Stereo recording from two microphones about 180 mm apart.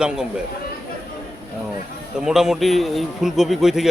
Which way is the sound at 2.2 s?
5° right (ahead or behind).